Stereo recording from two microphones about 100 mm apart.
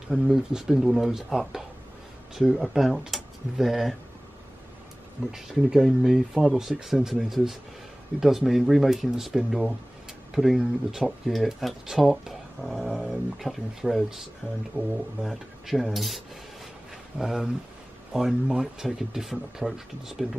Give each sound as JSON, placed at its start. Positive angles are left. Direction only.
{"t": 0.1, "sound": "speech", "side_deg": -5}
{"t": 5.3, "sound": "speech", "side_deg": -5}
{"t": 17.2, "sound": "speech", "side_deg": -5}